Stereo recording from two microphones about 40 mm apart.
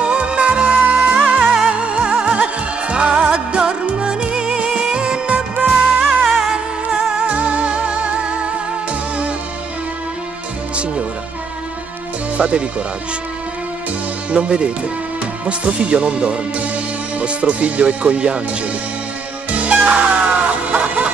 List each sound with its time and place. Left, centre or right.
0.0 s music: right
1.5 s music: centre
1.9 s music: right
6.0 s music: centre
6.5 s music: centre
7.2 s music: right
12.4 s speech: right
14.3 s speech: right
19.5 s music: right